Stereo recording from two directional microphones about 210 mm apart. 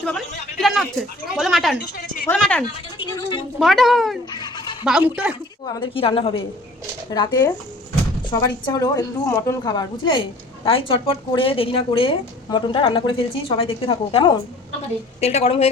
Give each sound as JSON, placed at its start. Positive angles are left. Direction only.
{"t": 0.0, "sound": "a man's voice", "side_deg": 5}
{"t": 2.6, "sound": "speech", "side_deg": 20}
{"t": 3.6, "sound": "a man's voice", "side_deg": 0}
{"t": 4.3, "sound": "a sound", "side_deg": 20}
{"t": 4.8, "sound": "a man's voice", "side_deg": -5}
{"t": 5.6, "sound": "a woman's voice", "side_deg": 20}